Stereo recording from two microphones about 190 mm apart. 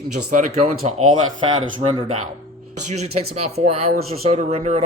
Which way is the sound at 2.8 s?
35° right (ahead or behind).